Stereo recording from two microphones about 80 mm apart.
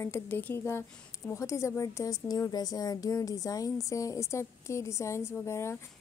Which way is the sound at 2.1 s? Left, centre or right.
Left.